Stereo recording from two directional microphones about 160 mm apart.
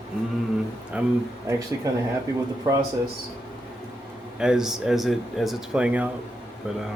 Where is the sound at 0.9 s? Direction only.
5° right (ahead or behind).